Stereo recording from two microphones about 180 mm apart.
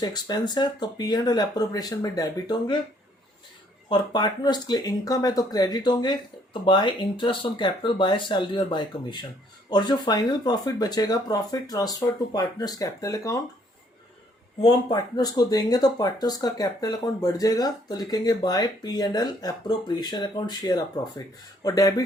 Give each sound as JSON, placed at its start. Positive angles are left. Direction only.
{"t": 0.0, "sound": "speech", "side_deg": 25}
{"t": 3.8, "sound": "speech", "side_deg": 25}
{"t": 14.6, "sound": "speech", "side_deg": 25}